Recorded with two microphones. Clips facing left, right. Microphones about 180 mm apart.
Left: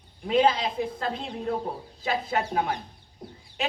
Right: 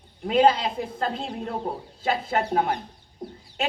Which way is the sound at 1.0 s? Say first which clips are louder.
Right 3 dB; 35° right (ahead or behind).